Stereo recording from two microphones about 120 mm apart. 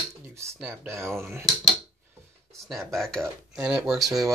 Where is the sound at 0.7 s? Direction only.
20° right (ahead or behind).